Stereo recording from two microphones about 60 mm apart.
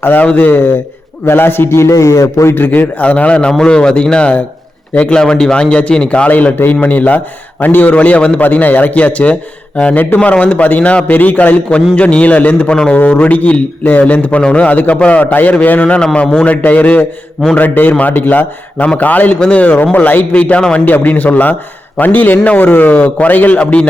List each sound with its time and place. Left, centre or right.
0.0 s a man's voice: left
1.2 s a man's voice: left
3.0 s a man's voice: left
20.8 s a man's voice: left